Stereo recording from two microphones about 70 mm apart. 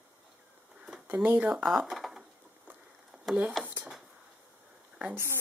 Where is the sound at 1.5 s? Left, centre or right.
Centre.